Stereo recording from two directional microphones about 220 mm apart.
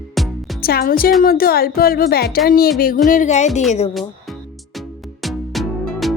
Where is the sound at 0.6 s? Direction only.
40° left (ahead or behind).